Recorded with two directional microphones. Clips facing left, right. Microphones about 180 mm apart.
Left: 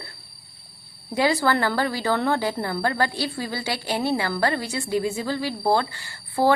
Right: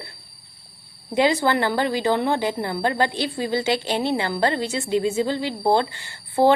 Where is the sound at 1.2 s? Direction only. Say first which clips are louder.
Right 2 dB; 20° right (ahead or behind).